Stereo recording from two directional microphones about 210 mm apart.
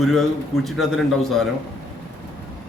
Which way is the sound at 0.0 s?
Centre (ahead or behind).